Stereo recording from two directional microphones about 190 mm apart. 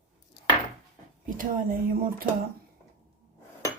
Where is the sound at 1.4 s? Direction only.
50° right (ahead or behind).